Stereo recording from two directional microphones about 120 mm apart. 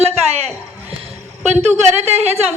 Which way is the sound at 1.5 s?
65° right (ahead or behind).